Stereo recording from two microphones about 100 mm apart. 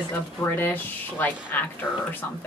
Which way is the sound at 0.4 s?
20° left (ahead or behind).